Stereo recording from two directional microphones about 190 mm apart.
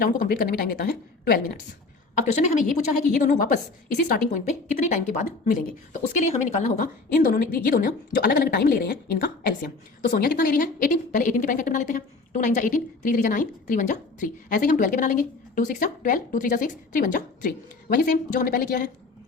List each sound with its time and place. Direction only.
0.0 s a woman's voice: 50° left (ahead or behind)
2.1 s a woman's voice: 40° left (ahead or behind)